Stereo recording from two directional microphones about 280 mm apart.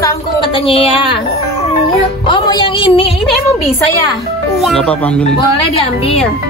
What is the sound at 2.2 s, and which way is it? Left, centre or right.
Music, centre.